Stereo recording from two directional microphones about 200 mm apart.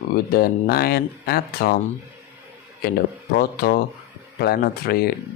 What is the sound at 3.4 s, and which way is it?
Speech, 50° left (ahead or behind).